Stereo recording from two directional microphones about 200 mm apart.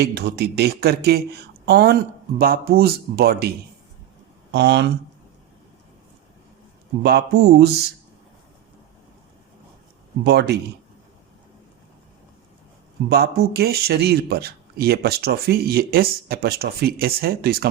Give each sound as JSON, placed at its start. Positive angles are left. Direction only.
{"t": 0.0, "sound": "speech", "side_deg": -55}
{"t": 4.5, "sound": "speech", "side_deg": -60}
{"t": 7.0, "sound": "speech", "side_deg": -55}
{"t": 10.2, "sound": "speech", "side_deg": -55}
{"t": 13.1, "sound": "speech", "side_deg": -55}